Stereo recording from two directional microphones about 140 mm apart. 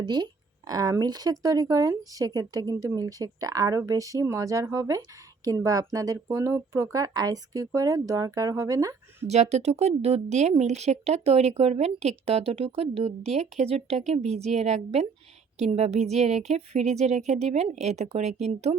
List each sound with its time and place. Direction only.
0.0 s speech: 30° right (ahead or behind)
9.2 s speech: 50° right (ahead or behind)